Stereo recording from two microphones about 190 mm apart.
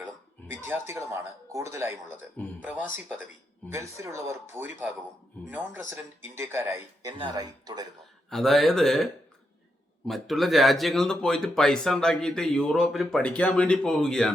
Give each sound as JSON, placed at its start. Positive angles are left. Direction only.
{"t": 0.7, "sound": "speech", "side_deg": -15}
{"t": 2.4, "sound": "speech", "side_deg": 10}
{"t": 3.7, "sound": "speech", "side_deg": -15}
{"t": 8.3, "sound": "speech", "side_deg": 0}
{"t": 10.1, "sound": "speech", "side_deg": 0}